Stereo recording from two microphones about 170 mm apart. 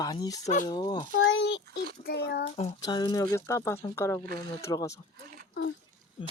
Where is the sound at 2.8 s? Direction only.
25° left (ahead or behind).